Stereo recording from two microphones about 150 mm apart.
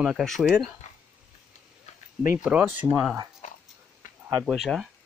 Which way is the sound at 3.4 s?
50° left (ahead or behind).